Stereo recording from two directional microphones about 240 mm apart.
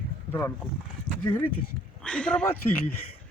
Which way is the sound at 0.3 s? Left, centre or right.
Centre.